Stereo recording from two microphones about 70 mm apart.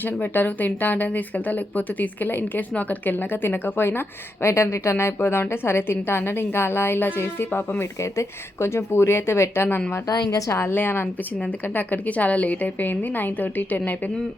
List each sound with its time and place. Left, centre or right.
0.0 s a woman's voice: left
7.8 s a woman's voice: left